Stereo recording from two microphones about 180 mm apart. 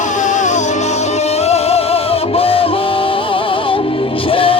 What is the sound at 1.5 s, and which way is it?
Music, 35° left (ahead or behind).